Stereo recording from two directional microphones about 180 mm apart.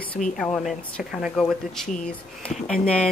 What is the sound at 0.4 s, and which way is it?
Speech, 5° left (ahead or behind).